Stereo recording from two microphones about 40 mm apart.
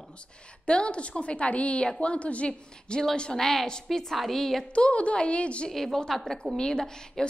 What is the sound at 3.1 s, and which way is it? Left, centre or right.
Speech, centre.